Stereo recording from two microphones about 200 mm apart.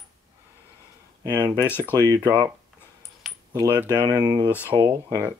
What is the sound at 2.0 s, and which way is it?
Speech, 20° right (ahead or behind).